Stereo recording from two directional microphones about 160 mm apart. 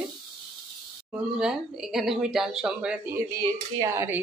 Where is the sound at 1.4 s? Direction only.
5° right (ahead or behind).